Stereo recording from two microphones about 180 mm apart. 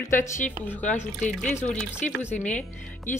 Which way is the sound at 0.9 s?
10° left (ahead or behind).